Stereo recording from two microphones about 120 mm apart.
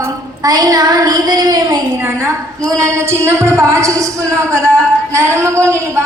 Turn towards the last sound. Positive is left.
turn(degrees=-25)  # may be behind; listen again after turning